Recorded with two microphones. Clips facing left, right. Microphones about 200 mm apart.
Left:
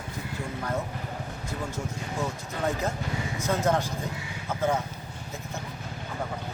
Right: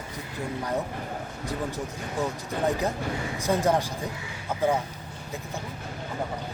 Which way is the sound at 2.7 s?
15° right (ahead or behind).